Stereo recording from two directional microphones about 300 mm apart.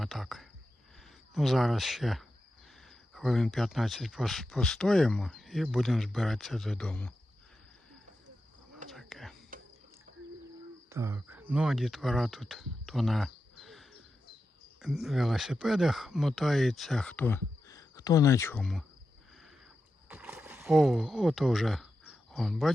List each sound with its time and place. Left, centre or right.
0.0 s speech: centre
8.9 s whispering: centre
9.5 s cricket: right
10.8 s speech: centre
20.1 s a sound: centre